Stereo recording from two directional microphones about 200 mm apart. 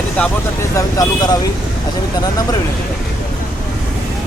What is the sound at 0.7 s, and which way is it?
Speech, 20° left (ahead or behind).